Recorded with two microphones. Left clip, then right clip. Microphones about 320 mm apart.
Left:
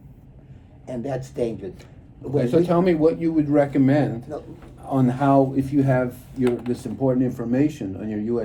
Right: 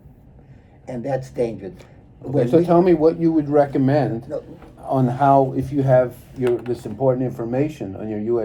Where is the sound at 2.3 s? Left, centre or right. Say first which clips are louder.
Right 4 dB; centre.